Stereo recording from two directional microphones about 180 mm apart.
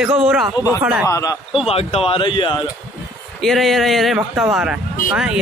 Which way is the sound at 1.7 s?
35° left (ahead or behind).